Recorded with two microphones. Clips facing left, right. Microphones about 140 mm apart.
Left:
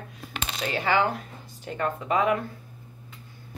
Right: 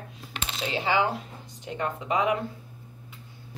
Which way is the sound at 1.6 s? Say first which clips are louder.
Left 2 dB; 20° right (ahead or behind).